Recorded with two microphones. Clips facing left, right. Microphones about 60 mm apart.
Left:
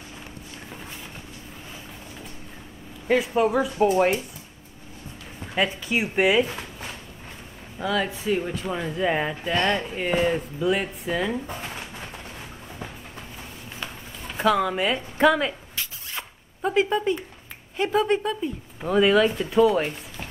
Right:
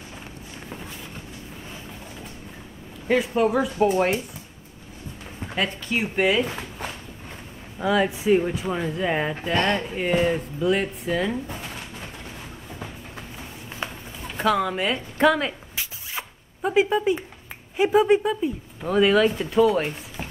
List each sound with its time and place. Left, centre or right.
3.1 s speech: centre
5.7 s speech: centre
7.8 s speech: centre
13.8 s a sound: right
14.2 s speech: centre
15.7 s zipper: centre
17.7 s speech: centre
18.8 s speech: centre